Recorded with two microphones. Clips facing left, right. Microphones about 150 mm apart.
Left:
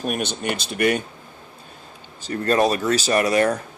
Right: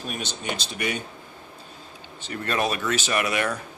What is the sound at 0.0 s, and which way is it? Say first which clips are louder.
Speech: left 7 dB; 60° left (ahead or behind).